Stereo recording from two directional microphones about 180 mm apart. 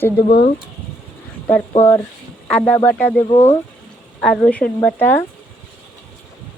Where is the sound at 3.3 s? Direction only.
35° left (ahead or behind).